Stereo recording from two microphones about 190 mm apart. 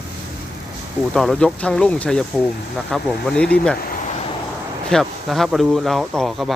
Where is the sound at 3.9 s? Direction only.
45° left (ahead or behind).